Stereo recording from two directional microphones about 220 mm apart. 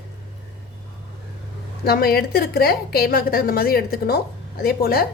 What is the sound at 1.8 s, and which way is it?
A woman's voice, 45° left (ahead or behind).